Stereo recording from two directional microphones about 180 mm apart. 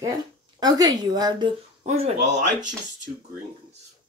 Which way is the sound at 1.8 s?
40° right (ahead or behind).